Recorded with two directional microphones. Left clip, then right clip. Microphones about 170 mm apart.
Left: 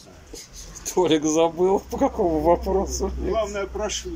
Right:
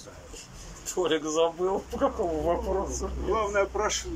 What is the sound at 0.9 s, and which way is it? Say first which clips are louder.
Speech: left 6 dB; 20° left (ahead or behind).